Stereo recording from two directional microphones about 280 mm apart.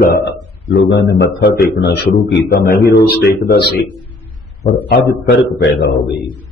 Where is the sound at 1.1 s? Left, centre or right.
Left.